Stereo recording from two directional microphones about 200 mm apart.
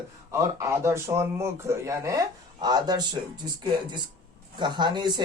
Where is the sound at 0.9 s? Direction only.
15° right (ahead or behind).